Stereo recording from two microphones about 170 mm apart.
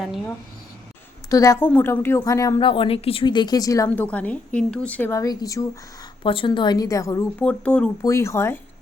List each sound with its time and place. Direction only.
1.3 s a woman's voice: 20° left (ahead or behind)
2.6 s speech: 30° left (ahead or behind)
7.3 s a woman's voice: 5° left (ahead or behind)